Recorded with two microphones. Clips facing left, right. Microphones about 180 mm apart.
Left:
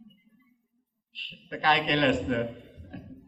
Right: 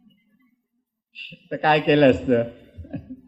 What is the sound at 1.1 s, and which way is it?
A man's voice, 55° right (ahead or behind).